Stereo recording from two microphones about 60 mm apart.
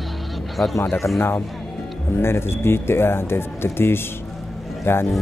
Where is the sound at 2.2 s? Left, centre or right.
Left.